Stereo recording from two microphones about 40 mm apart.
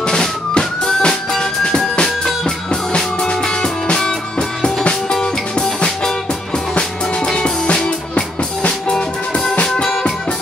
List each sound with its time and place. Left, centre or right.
0.0 s music: centre
7.2 s music: centre
8.9 s music: centre